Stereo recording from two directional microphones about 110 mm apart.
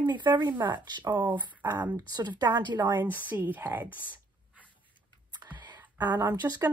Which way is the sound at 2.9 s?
15° right (ahead or behind).